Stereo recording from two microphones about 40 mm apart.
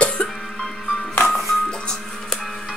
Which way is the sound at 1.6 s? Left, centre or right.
Centre.